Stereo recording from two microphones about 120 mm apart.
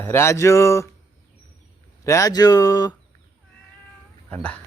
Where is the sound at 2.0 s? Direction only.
25° left (ahead or behind).